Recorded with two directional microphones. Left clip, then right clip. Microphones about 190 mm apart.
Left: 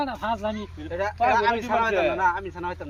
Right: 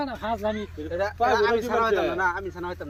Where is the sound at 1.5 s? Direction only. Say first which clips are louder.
Even; 10° left (ahead or behind).